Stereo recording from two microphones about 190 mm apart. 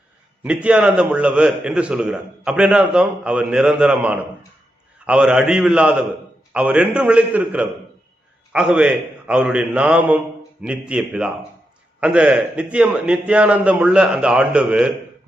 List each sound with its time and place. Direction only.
0.4 s a man's voice: 5° right (ahead or behind)